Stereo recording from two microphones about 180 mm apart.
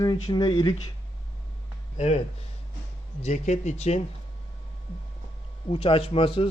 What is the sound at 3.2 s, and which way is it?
Speech, 40° left (ahead or behind).